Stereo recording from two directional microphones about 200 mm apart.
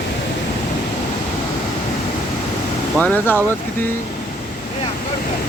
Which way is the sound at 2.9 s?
10° left (ahead or behind).